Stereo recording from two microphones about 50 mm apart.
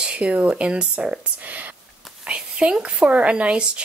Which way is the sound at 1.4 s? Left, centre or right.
Right.